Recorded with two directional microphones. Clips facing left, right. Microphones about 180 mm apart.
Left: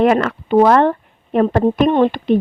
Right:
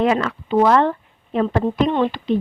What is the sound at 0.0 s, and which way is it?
Speech, 60° left (ahead or behind).